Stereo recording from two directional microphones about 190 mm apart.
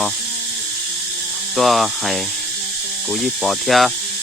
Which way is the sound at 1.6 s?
Centre (ahead or behind).